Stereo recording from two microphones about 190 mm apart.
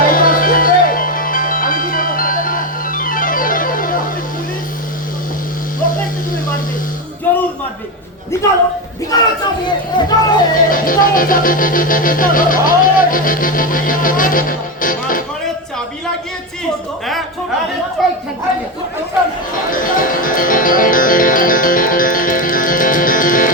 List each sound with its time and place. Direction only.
0.0 s music: 45° left (ahead or behind)
9.1 s a sound: 20° left (ahead or behind)
9.6 s music: 20° left (ahead or behind)
10.5 s music: 45° left (ahead or behind)
18.0 s speech: centre (ahead or behind)
19.7 s speech: 45° left (ahead or behind)